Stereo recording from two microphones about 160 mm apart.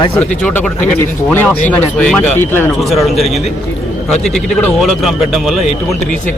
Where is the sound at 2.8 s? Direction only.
Centre (ahead or behind).